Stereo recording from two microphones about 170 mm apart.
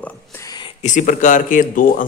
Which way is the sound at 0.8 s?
45° left (ahead or behind).